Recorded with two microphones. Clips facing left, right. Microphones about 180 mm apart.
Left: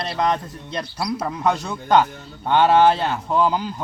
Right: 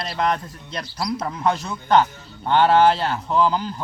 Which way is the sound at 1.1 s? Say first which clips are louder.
Left 1 dB; 10° left (ahead or behind).